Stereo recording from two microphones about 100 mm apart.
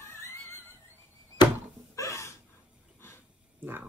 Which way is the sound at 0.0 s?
25° left (ahead or behind).